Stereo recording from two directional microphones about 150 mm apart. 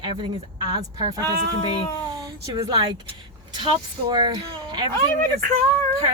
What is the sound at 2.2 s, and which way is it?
A woman's voice, 25° right (ahead or behind).